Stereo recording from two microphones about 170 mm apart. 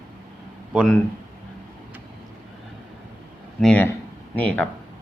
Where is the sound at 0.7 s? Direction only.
5° right (ahead or behind).